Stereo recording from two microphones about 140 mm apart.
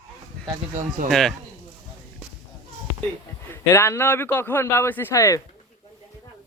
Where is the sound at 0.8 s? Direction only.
80° right.